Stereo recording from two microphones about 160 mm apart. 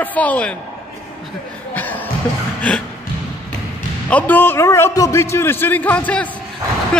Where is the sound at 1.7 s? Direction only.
10° left (ahead or behind).